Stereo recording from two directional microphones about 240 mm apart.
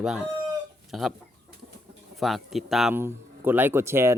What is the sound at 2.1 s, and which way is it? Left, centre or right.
Speech, centre.